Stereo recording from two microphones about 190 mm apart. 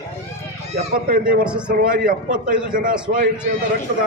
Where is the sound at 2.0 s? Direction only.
45° right (ahead or behind).